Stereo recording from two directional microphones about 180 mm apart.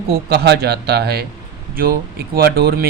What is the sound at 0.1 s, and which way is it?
Speech, 60° right (ahead or behind).